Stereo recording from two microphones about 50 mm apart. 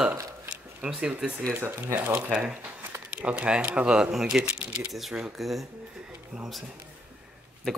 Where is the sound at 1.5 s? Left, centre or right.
Right.